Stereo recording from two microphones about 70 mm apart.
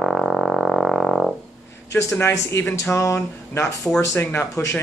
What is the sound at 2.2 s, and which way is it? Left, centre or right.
A man's voice, left.